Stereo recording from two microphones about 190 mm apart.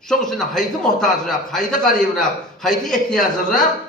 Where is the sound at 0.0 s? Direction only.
5° left (ahead or behind).